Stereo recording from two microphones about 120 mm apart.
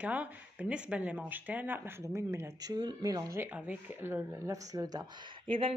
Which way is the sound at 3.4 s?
15° right (ahead or behind).